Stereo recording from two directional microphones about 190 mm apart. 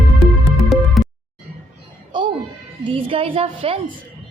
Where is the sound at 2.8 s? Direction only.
25° right (ahead or behind).